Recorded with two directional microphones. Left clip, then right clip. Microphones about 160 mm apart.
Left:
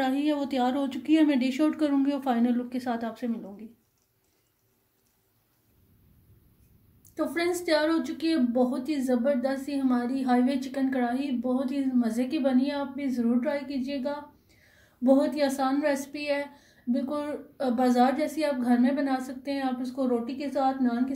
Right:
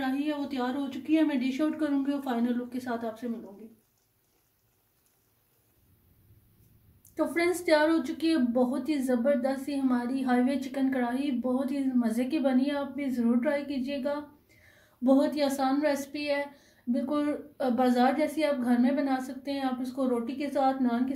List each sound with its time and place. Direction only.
0.0 s a woman's voice: 65° left (ahead or behind); by 3.3 s 45° left (ahead or behind)
7.2 s a woman's voice: 5° left (ahead or behind)
15.0 s a woman's voice: 20° left (ahead or behind); by 21.1 s centre (ahead or behind)